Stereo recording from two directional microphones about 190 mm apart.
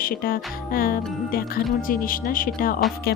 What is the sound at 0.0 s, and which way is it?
Music, 50° left (ahead or behind).